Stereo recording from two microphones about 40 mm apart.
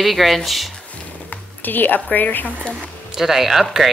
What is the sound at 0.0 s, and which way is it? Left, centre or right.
Speech, centre.